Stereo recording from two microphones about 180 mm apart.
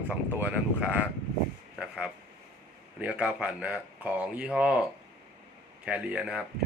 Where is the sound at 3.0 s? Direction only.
5° right (ahead or behind).